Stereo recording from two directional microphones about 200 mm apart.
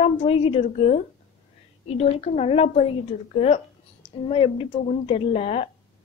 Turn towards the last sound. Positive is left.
turn(degrees=30)  # may be behind; listen again after turning